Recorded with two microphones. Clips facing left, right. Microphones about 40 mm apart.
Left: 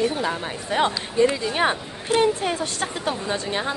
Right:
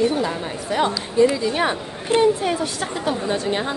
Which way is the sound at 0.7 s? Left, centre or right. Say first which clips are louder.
Right 2 dB; left.